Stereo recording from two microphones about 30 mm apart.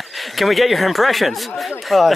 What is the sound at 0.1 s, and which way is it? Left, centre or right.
Speech, centre.